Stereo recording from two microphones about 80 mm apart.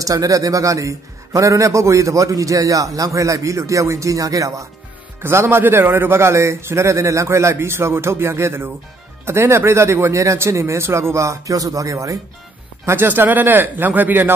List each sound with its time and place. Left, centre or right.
0.0 s a man's voice: right
5.2 s a man's voice: right
12.8 s speech: right